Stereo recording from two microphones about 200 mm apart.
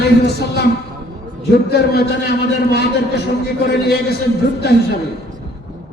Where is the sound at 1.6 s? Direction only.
55° left (ahead or behind).